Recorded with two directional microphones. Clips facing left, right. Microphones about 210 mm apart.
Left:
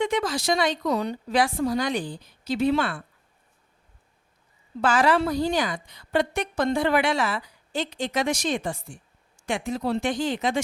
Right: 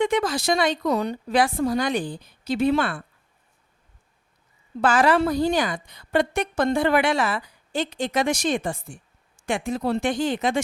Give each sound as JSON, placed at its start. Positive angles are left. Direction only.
{"t": 0.0, "sound": "a woman's voice", "side_deg": -55}
{"t": 4.8, "sound": "a woman's voice", "side_deg": -55}